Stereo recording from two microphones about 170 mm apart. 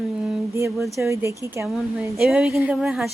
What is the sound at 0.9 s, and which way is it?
Speech, 15° right (ahead or behind).